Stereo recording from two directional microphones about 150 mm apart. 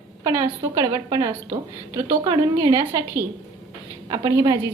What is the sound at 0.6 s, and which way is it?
A woman's voice, 20° right (ahead or behind).